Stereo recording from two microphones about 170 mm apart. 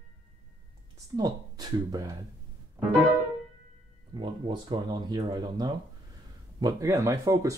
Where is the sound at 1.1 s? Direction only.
20° right (ahead or behind).